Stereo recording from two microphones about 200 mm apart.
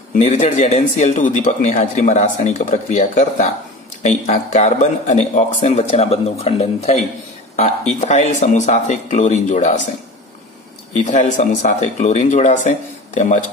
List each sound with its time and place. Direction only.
0.1 s a man's voice: 35° left (ahead or behind)
10.9 s a man's voice: 40° left (ahead or behind)